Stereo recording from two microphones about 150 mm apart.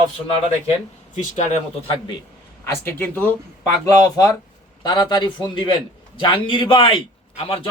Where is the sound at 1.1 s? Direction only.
50° left (ahead or behind).